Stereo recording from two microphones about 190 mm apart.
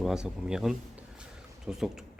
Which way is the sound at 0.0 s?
5° right (ahead or behind).